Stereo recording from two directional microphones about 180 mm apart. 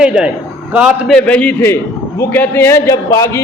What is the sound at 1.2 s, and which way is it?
A man's voice, 10° left (ahead or behind).